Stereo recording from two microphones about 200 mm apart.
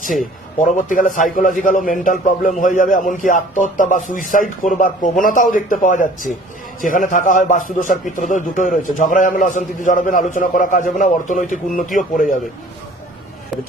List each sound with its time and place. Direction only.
0.6 s a man's voice: 40° left (ahead or behind)